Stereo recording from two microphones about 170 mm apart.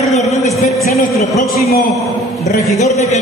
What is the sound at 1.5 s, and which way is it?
Speech, 65° left (ahead or behind).